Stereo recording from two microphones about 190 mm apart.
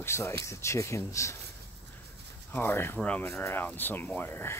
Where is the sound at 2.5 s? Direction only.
10° left (ahead or behind).